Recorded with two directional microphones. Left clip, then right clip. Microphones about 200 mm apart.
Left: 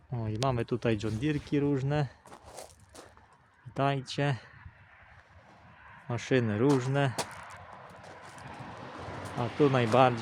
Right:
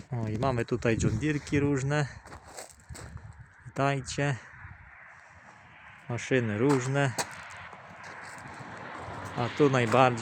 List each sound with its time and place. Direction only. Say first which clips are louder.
0.1 s speech: right 1 dB; 5° right (ahead or behind)
1.2 s walk: right 1 dB; centre (ahead or behind)
3.8 s speech: right 1 dB; 5° right (ahead or behind)
6.1 s speech: right 1 dB; 5° left (ahead or behind)
8.4 s vehicle: right 2 dB; 60° left (ahead or behind); by 9.6 s 45° left (ahead or behind)
9.6 s speech: right 1 dB; centre (ahead or behind)